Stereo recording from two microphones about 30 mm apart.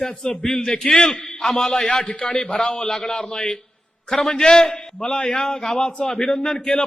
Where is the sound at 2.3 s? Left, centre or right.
Centre.